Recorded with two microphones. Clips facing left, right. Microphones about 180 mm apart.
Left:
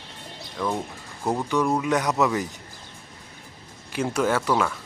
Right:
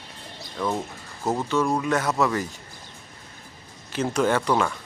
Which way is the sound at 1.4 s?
10° left (ahead or behind).